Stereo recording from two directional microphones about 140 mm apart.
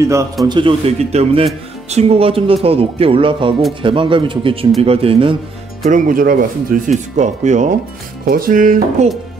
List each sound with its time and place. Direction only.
0.0 s speech: 20° right (ahead or behind)
0.5 s a man's voice: 35° right (ahead or behind)
5.9 s speech: 70° right (ahead or behind)
8.3 s music: 85° right